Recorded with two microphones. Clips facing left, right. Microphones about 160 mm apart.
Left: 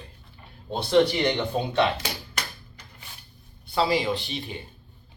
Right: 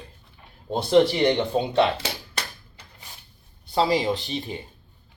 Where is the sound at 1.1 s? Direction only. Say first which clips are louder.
Right 4 dB; 25° right (ahead or behind).